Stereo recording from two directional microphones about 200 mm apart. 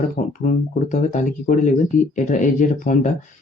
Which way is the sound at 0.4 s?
40° left (ahead or behind).